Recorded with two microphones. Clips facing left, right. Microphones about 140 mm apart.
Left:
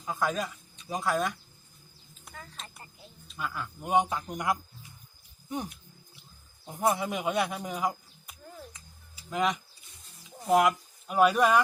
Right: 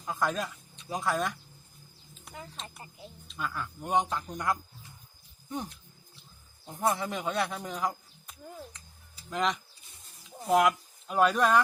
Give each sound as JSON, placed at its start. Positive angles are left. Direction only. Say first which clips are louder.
{"t": 0.0, "sound": "speech", "louder": "left 1 dB", "side_deg": 0}
{"t": 2.3, "sound": "speech", "louder": "right 3 dB", "side_deg": -20}
{"t": 3.2, "sound": "speech", "louder": "even", "side_deg": 5}